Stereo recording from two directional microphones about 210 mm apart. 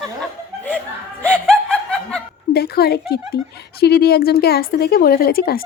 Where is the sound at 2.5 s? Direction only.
50° left (ahead or behind).